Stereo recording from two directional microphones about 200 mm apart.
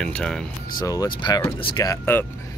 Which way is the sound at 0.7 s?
20° left (ahead or behind).